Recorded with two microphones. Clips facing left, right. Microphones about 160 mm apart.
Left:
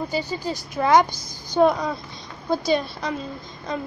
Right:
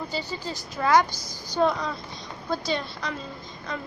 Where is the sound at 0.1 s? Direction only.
15° left (ahead or behind).